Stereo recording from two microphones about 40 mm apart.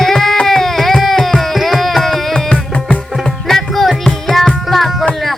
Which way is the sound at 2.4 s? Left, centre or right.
Left.